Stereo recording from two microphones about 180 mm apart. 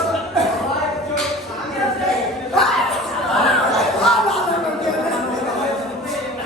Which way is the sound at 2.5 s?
Centre (ahead or behind).